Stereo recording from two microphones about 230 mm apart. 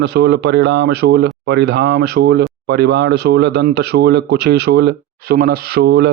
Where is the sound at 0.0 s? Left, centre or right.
Right.